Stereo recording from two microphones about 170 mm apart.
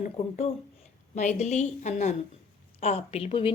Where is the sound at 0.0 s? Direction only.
40° left (ahead or behind).